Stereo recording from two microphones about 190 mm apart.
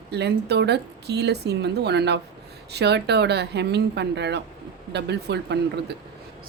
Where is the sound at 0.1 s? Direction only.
60° right (ahead or behind).